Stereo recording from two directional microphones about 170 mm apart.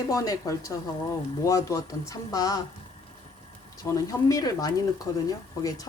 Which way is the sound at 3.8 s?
20° left (ahead or behind).